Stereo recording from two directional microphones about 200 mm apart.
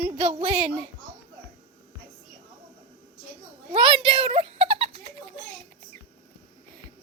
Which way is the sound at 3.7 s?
25° right (ahead or behind).